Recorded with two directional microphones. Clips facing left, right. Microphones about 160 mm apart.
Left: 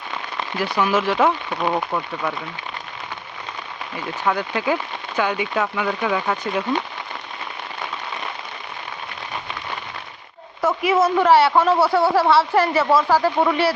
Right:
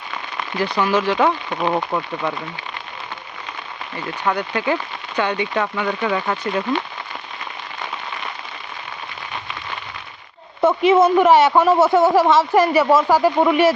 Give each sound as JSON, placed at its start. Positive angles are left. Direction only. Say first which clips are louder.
{"t": 0.6, "sound": "speech", "louder": "right 1 dB", "side_deg": 5}
{"t": 1.7, "sound": "speech", "louder": "right 2 dB", "side_deg": -5}
{"t": 4.3, "sound": "speech", "louder": "right 1 dB", "side_deg": 5}
{"t": 10.6, "sound": "speech", "louder": "right 5 dB", "side_deg": -25}